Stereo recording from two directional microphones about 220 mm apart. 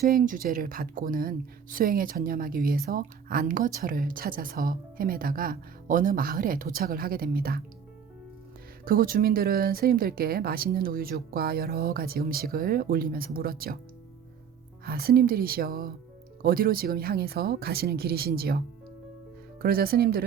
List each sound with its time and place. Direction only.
0.0 s speech: 40° right (ahead or behind)
8.8 s speech: 40° right (ahead or behind)
14.8 s speech: 45° right (ahead or behind)
19.6 s speech: 45° right (ahead or behind)